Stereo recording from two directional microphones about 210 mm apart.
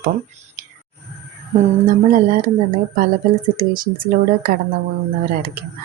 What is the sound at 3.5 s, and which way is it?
Speech, 40° right (ahead or behind).